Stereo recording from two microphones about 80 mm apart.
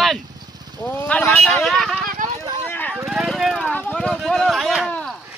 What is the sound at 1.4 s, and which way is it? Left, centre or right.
Speech, centre.